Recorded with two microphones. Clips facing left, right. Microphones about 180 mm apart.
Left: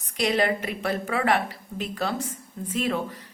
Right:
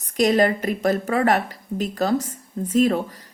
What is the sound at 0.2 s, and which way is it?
A woman's voice, 45° right (ahead or behind).